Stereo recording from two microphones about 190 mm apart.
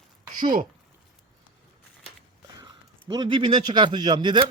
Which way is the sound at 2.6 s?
25° right (ahead or behind).